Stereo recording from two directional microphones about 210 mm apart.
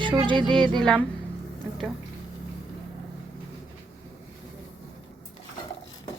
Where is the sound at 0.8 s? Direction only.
5° left (ahead or behind).